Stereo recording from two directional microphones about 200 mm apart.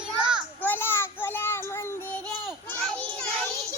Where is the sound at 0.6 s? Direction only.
10° left (ahead or behind).